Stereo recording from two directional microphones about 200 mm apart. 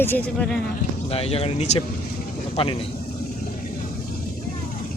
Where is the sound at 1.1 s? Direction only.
30° left (ahead or behind).